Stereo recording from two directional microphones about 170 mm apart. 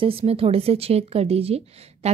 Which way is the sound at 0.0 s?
35° right (ahead or behind).